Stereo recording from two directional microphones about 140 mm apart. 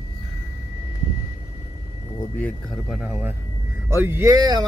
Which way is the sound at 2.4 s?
Centre (ahead or behind).